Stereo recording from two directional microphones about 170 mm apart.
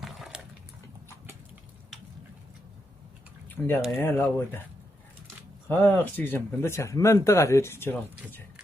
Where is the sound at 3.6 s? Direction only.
15° left (ahead or behind).